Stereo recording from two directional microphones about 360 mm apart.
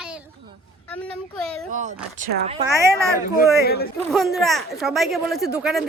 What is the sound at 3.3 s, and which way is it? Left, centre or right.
Speech, left.